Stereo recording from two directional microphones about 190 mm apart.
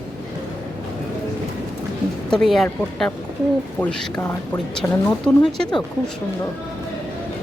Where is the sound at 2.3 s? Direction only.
Centre (ahead or behind).